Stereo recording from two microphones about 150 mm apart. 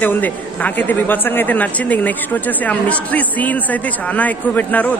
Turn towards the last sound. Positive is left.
turn(degrees=10)  # may be behind; listen again after turning